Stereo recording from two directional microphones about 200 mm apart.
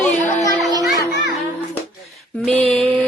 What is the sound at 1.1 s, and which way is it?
Children playing, 60° left (ahead or behind).